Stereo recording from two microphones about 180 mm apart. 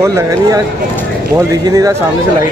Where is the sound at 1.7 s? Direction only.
20° right (ahead or behind).